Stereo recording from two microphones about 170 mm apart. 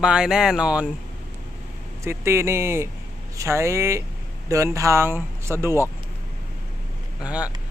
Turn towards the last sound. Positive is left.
turn(degrees=-5)  # may be behind; listen again after turning